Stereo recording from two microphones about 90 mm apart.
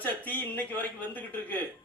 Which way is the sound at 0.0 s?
20° left (ahead or behind).